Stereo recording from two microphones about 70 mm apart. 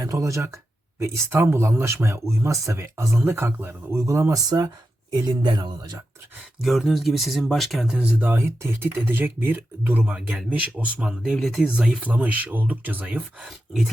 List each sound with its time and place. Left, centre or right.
0.0 s speech: right
0.9 s speech: right
4.4 s speech: right
5.1 s speech: right
6.6 s speech: centre
7.9 s speech: right
11.1 s speech: centre
12.0 s speech: right
13.1 s speech: centre